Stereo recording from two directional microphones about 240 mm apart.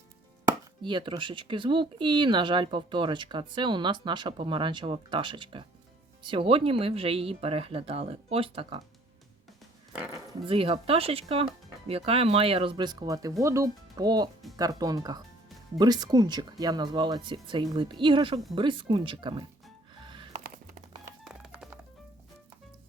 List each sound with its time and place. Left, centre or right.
0.4 s speech: centre
10.4 s speech: right
20.1 s music: right
21.2 s music: centre